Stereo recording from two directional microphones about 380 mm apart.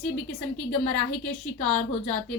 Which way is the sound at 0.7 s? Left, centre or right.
Left.